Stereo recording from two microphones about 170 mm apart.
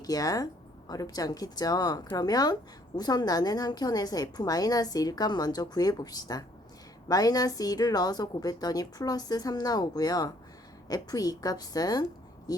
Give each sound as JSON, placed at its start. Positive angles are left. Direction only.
{"t": 0.0, "sound": "a woman's voice", "side_deg": 20}